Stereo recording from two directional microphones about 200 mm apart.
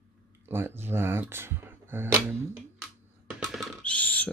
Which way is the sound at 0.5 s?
10° right (ahead or behind).